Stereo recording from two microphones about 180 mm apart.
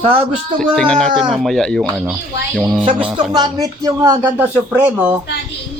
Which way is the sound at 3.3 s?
20° right (ahead or behind).